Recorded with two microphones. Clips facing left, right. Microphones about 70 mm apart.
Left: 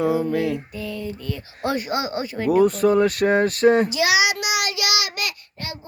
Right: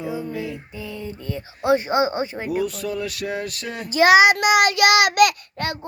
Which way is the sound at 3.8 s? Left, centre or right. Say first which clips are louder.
Right 6 dB; right.